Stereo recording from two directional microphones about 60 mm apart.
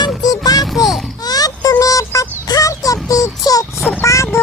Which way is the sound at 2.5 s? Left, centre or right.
Left.